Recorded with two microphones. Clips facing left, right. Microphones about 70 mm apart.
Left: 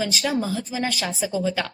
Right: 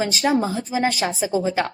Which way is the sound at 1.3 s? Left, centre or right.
Right.